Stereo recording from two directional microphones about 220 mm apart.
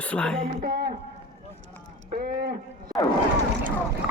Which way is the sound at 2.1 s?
40° right (ahead or behind).